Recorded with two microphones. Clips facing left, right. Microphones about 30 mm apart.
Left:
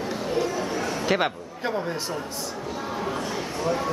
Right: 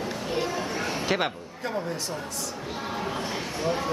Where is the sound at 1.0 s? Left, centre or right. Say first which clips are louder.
Left 3 dB; centre.